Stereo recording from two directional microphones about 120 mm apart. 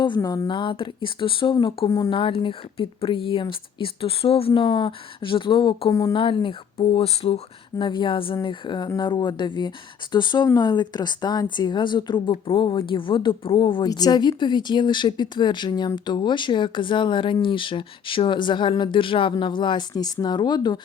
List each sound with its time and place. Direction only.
0.2 s speech: 30° left (ahead or behind); by 1.5 s 45° left (ahead or behind)
1.9 s speech: 35° left (ahead or behind)
2.1 s speech: 45° left (ahead or behind)
5.9 s speech: 30° left (ahead or behind)
6.1 s speech: 45° left (ahead or behind)
7.8 s speech: 40° left (ahead or behind)
13.8 s speech: 35° left (ahead or behind)